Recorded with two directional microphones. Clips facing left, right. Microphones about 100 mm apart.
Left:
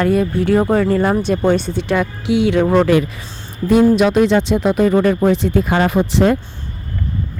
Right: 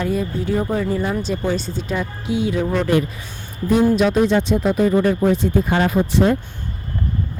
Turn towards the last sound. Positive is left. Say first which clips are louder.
# left 2 dB
turn(degrees=80)